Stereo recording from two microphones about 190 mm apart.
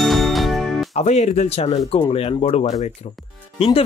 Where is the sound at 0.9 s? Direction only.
35° left (ahead or behind).